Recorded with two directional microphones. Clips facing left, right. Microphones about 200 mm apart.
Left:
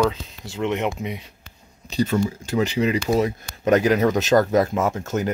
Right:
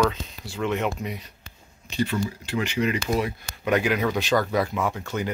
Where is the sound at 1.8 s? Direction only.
40° left (ahead or behind).